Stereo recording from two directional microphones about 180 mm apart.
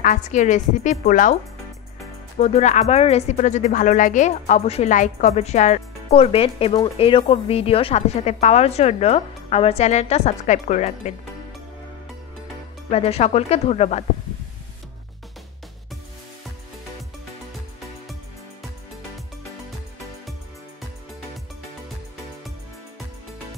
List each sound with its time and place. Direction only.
0.0 s a woman's voice: 45° left (ahead or behind)
2.3 s speech: 35° left (ahead or behind)
12.9 s speech: 35° left (ahead or behind)